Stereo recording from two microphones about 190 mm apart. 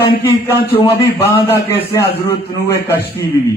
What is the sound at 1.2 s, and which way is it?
A man's voice, 10° left (ahead or behind).